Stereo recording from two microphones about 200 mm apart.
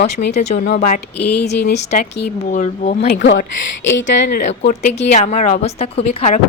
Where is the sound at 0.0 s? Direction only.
60° left (ahead or behind).